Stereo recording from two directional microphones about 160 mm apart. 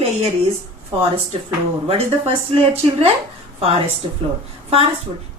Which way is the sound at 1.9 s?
35° right (ahead or behind).